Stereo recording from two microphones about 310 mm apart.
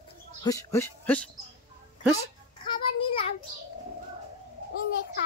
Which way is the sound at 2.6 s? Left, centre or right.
Centre.